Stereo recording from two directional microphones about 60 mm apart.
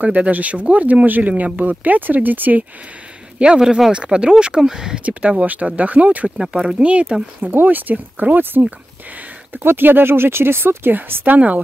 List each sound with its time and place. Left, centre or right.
0.0 s speech: right
3.3 s speech: centre
5.0 s speech: right
6.3 s speech: centre
7.4 s speech: right